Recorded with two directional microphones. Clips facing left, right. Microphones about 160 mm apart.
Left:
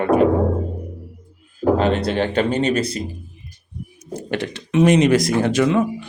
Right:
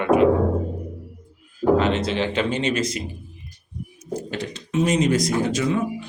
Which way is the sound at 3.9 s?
65° left (ahead or behind).